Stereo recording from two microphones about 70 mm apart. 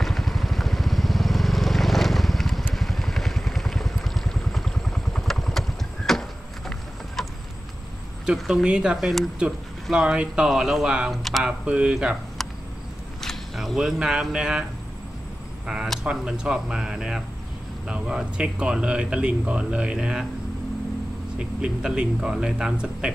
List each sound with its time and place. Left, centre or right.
0.0 s vehicle: centre
8.4 s speech: centre
8.6 s speech: centre
8.9 s speech: centre
11.1 s speech: centre
11.6 s speech: centre
13.2 s speech: centre
15.6 s a sound: centre
16.0 s speech: centre
21.4 s speech: centre